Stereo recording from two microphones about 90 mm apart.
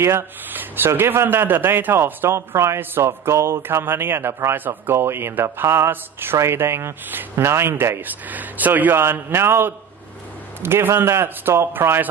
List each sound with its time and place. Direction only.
0.0 s speech: 25° right (ahead or behind)